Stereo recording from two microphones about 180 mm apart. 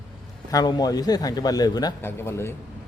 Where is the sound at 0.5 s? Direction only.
20° left (ahead or behind).